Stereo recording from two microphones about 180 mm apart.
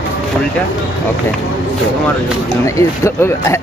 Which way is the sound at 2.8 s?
15° left (ahead or behind).